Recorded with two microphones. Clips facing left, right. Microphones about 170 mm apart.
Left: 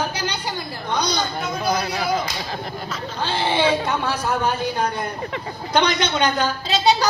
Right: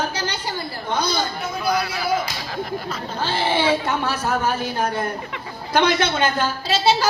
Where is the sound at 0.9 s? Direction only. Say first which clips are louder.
Even; 15° left (ahead or behind).